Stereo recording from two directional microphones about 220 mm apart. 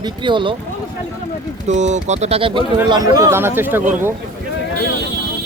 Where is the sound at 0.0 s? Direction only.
20° right (ahead or behind).